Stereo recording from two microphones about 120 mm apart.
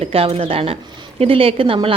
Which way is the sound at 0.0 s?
50° right (ahead or behind).